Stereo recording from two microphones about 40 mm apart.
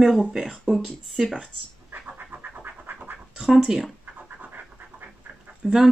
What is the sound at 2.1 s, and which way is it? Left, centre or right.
Scratch, right.